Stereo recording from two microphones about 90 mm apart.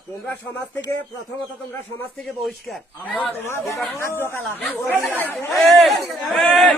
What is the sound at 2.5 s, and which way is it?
Speech, centre (ahead or behind).